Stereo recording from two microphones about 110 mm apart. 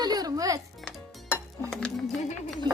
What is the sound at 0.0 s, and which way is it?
Music, 35° right (ahead or behind).